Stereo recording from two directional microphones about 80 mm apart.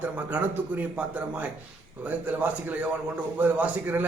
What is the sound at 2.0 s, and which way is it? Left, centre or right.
A man's voice, centre.